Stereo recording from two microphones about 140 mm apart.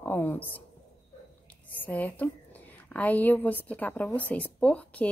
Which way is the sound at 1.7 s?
10° left (ahead or behind).